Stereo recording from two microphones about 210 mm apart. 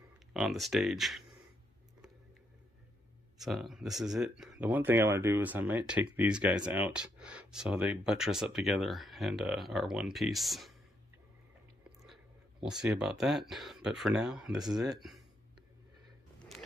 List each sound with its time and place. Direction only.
0.3 s speech: centre (ahead or behind)
3.3 s speech: centre (ahead or behind)
12.1 s speech: centre (ahead or behind)